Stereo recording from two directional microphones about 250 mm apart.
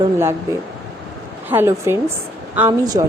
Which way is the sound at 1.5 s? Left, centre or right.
Centre.